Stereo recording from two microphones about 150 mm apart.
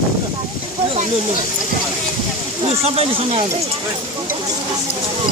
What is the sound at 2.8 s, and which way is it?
Speech, 45° right (ahead or behind).